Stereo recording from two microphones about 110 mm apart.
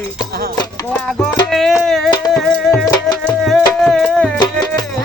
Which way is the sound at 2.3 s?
Centre (ahead or behind).